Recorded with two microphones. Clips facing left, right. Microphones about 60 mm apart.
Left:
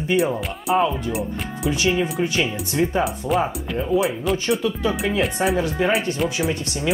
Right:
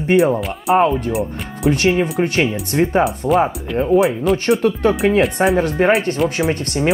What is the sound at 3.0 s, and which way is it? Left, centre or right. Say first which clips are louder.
Speech: right 6 dB; centre.